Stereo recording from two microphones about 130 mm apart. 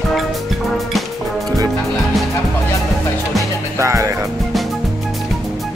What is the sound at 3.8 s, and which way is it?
Music, 25° right (ahead or behind).